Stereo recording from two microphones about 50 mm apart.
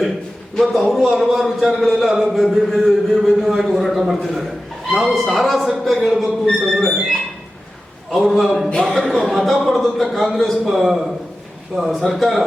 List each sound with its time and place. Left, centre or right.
0.6 s speech: centre
8.1 s speech: centre
8.7 s speech: centre
9.0 s speech: centre